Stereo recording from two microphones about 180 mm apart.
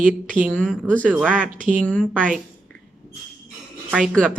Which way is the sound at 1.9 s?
5° left (ahead or behind).